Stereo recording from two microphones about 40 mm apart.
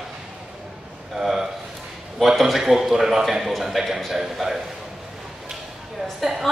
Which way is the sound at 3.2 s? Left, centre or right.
Centre.